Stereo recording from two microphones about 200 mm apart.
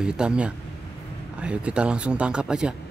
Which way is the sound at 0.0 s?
5° right (ahead or behind).